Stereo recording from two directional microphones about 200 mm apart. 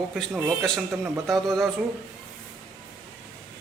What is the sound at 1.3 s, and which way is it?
Speech, centre (ahead or behind).